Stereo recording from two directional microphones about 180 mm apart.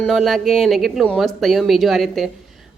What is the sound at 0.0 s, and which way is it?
Speech, centre (ahead or behind).